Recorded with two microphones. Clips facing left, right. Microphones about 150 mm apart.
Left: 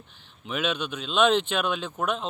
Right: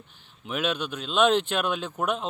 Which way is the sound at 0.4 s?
5° right (ahead or behind).